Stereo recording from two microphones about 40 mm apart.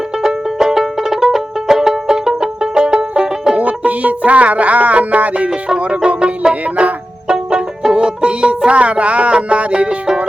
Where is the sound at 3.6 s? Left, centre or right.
Right.